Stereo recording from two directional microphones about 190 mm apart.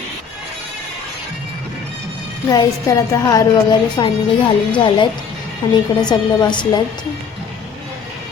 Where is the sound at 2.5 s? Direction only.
20° left (ahead or behind).